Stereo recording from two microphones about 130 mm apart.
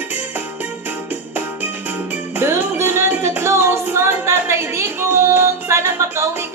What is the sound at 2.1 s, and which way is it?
Music, 20° right (ahead or behind).